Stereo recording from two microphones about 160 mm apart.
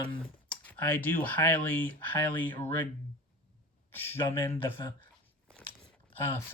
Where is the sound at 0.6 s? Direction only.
10° left (ahead or behind).